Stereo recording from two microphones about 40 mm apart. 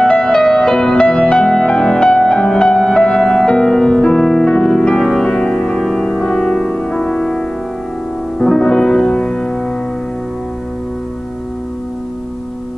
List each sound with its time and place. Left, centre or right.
0.3 s music: centre
8.4 s music: centre